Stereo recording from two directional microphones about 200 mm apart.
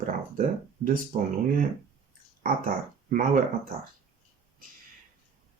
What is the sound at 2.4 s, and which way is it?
Speech, 45° right (ahead or behind).